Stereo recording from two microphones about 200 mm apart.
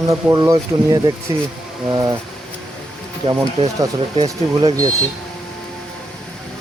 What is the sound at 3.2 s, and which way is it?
Speech, 25° right (ahead or behind).